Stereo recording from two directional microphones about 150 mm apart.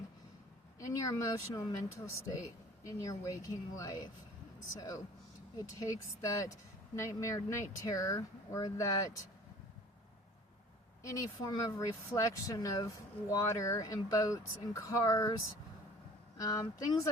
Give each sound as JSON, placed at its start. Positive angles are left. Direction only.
{"t": 0.8, "sound": "speech", "side_deg": 20}
{"t": 5.5, "sound": "speech", "side_deg": 20}
{"t": 11.0, "sound": "speech", "side_deg": 20}
{"t": 16.4, "sound": "speech", "side_deg": 25}